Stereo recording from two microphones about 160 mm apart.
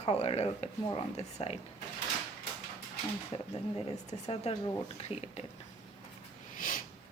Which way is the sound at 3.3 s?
40° left (ahead or behind).